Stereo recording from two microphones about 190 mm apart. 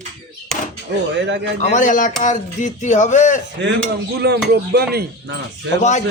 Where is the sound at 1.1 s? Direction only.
65° right (ahead or behind).